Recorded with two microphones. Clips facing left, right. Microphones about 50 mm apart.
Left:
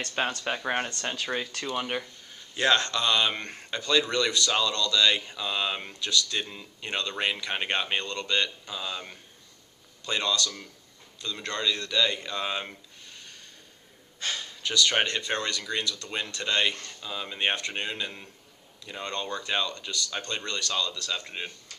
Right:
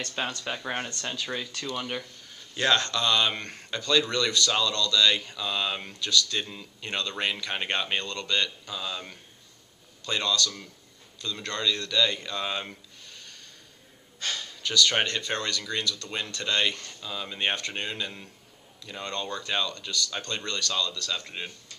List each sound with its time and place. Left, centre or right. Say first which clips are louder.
0.0 s speech: left 3 dB; left
5.9 s speech: right 2 dB; left
6.3 s speech: even; centre
10.0 s speech: even; centre
13.1 s a sound: even; left
14.2 s gasp: even; left
15.0 s speech: even; centre